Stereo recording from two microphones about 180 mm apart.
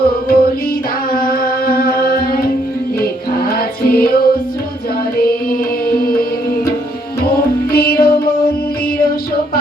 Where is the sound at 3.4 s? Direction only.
55° left (ahead or behind).